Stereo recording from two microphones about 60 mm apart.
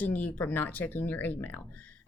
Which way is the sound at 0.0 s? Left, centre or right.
Left.